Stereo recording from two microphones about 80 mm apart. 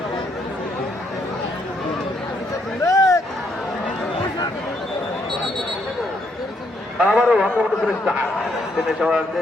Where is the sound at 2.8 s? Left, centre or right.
Left.